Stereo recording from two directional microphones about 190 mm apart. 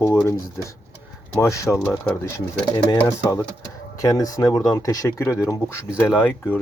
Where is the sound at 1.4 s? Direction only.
15° left (ahead or behind).